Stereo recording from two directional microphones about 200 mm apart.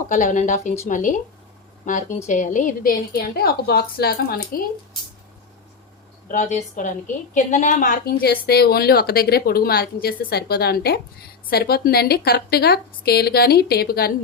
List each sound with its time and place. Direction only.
0.1 s a woman's voice: 40° left (ahead or behind)
6.2 s a woman's voice: 40° left (ahead or behind)